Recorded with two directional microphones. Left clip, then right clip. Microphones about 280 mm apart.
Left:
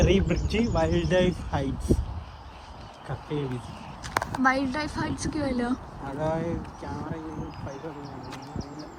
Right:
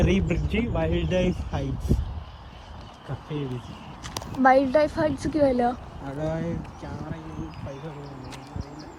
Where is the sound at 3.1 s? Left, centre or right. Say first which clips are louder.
Left 2 dB; left.